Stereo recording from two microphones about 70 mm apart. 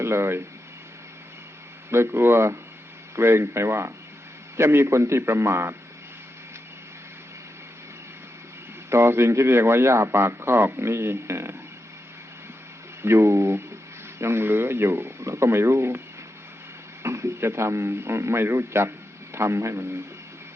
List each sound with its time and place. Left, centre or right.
0.0 s speech: right
1.9 s a man's voice: right
8.9 s a man's voice: right
13.0 s a man's voice: right
17.0 s a man's voice: right